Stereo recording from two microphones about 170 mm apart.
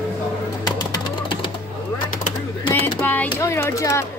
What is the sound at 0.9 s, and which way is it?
Music, 25° left (ahead or behind).